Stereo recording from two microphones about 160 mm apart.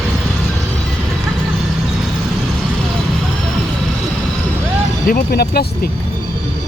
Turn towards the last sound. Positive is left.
turn(degrees=75)  # may be behind; listen again after turning